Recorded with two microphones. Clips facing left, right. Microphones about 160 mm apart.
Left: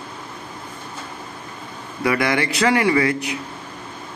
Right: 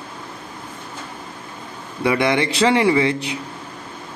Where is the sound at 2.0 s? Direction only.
25° right (ahead or behind).